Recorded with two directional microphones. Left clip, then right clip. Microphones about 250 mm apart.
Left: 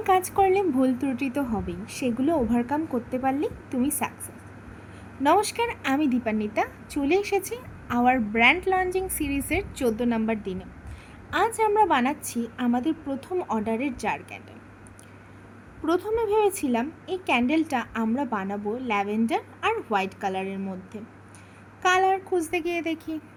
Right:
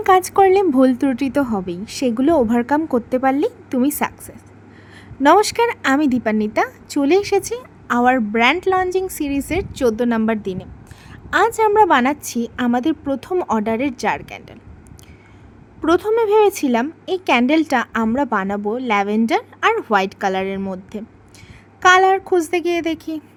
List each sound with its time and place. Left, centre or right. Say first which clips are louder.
0.0 s speech: right 8 dB; right
5.2 s speech: right 9 dB; right
15.8 s speech: right 9 dB; right